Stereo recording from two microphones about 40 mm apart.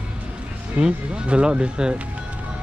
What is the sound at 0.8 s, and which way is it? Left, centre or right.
Speech, right.